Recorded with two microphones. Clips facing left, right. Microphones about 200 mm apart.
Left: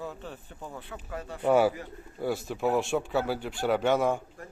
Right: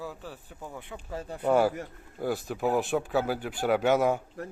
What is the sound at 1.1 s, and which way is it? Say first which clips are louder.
Speech: right 2 dB; 30° right (ahead or behind).